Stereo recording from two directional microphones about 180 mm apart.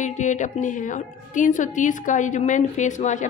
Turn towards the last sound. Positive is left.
turn(degrees=45)  # may be behind; listen again after turning